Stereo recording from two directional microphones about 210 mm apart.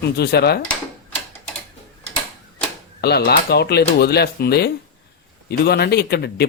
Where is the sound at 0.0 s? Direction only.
50° left (ahead or behind).